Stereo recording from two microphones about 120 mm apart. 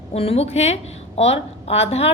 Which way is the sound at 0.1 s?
55° left (ahead or behind).